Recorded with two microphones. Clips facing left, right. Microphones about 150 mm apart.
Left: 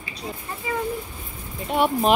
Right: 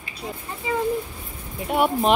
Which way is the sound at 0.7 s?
20° right (ahead or behind).